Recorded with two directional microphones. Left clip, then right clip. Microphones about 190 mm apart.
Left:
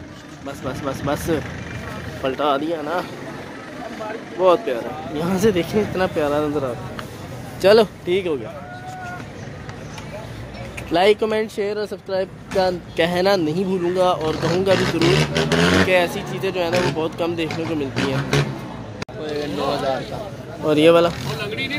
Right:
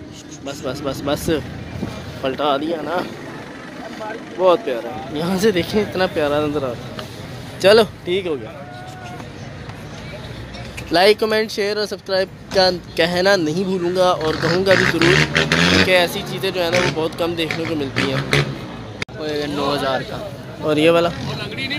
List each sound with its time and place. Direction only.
0.5 s speech: centre (ahead or behind)
4.4 s speech: centre (ahead or behind)
10.9 s speech: centre (ahead or behind)
13.0 s speech: 5° left (ahead or behind)
15.6 s a sound: 25° right (ahead or behind)
15.9 s speech: centre (ahead or behind)
19.2 s a sound: 45° right (ahead or behind)
20.6 s speech: 10° left (ahead or behind)
21.4 s vehicle: 40° right (ahead or behind)